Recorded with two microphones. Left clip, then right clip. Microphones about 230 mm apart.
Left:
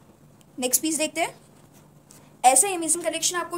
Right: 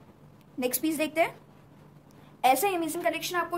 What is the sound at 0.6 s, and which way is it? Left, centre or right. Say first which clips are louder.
Speech: left 3 dB; right.